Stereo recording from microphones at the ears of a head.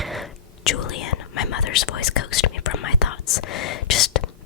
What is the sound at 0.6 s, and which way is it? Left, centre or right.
Whispering, left.